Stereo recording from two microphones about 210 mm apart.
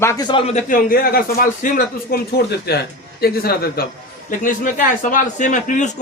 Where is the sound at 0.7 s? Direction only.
40° left (ahead or behind).